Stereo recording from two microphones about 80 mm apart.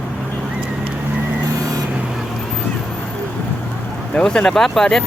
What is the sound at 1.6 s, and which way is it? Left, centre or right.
Vehicle, right.